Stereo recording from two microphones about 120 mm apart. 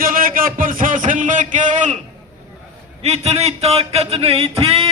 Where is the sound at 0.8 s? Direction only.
90° right.